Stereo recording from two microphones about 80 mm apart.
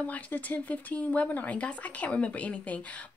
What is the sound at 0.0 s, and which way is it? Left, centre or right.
Speech, left.